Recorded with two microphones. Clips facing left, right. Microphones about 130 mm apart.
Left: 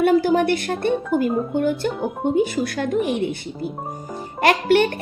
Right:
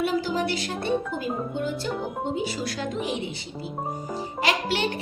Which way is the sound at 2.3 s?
55° left (ahead or behind).